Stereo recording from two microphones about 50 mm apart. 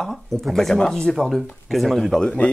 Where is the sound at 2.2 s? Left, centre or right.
Left.